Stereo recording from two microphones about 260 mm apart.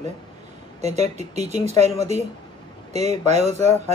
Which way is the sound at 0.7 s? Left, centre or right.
Right.